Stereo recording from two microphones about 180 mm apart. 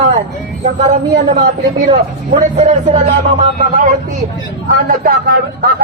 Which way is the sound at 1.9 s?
40° right (ahead or behind).